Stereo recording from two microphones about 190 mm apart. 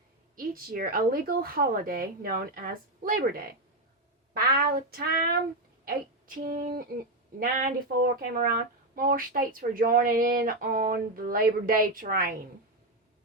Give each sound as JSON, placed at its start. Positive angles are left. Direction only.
{"t": 0.3, "sound": "speech", "side_deg": -50}